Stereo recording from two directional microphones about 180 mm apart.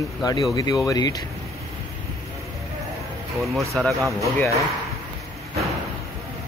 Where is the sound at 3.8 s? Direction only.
5° left (ahead or behind).